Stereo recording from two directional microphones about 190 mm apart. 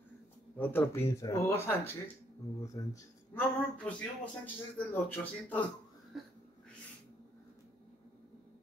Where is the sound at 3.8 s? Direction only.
5° left (ahead or behind).